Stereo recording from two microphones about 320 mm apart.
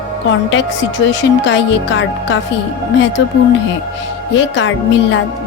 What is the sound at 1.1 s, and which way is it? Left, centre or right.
A woman's voice, left.